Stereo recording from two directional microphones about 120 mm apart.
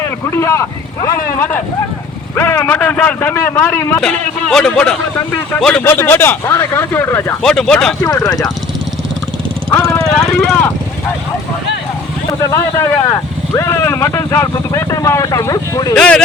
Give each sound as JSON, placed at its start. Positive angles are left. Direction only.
{"t": 0.0, "sound": "a man's voice", "side_deg": 20}
{"t": 5.8, "sound": "speech", "side_deg": 20}
{"t": 7.4, "sound": "speech", "side_deg": 5}
{"t": 8.0, "sound": "speech", "side_deg": 30}
{"t": 10.2, "sound": "speech", "side_deg": 5}
{"t": 12.4, "sound": "speech", "side_deg": 25}
{"t": 16.0, "sound": "a man's voice", "side_deg": 5}